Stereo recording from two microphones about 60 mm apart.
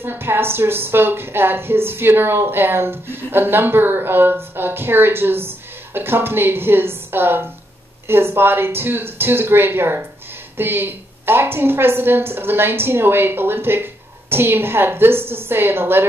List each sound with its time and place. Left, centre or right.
0.0 s a woman's voice: right